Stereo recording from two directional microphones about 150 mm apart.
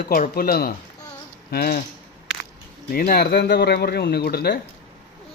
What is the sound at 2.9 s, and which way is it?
Speech, 80° left.